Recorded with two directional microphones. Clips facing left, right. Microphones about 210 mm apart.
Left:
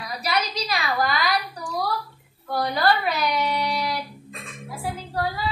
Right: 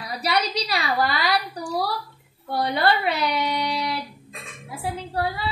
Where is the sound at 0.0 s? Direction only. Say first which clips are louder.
Right 2 dB; 35° right (ahead or behind).